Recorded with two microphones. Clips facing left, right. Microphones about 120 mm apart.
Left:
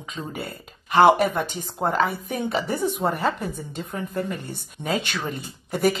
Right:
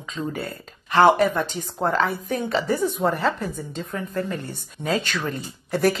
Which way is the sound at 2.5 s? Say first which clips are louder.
Right 3 dB; 20° left (ahead or behind).